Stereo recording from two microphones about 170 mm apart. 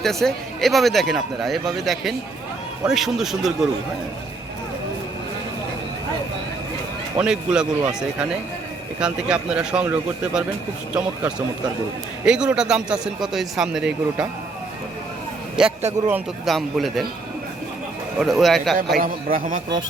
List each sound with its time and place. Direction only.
0.0 s speech: centre (ahead or behind)
7.2 s speech: 5° right (ahead or behind)
15.6 s speech: 5° right (ahead or behind)
18.2 s speech: centre (ahead or behind)
18.9 s a man's voice: 55° right (ahead or behind)